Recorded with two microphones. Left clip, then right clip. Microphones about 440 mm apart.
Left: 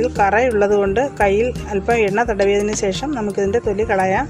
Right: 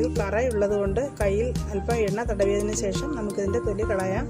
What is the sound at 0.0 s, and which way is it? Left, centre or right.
Speech, left.